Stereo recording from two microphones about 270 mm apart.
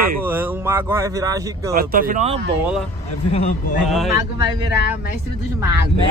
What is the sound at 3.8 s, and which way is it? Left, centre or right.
Speech, centre.